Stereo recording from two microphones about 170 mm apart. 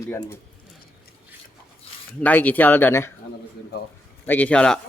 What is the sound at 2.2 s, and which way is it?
Speech, 10° left (ahead or behind).